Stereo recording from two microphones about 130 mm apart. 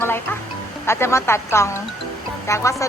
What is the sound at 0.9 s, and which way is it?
A woman's voice, 20° left (ahead or behind).